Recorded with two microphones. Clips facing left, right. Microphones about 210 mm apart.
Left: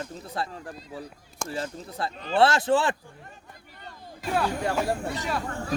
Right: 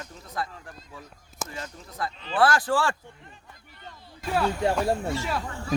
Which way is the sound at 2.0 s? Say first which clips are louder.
Left 2 dB; 30° left (ahead or behind).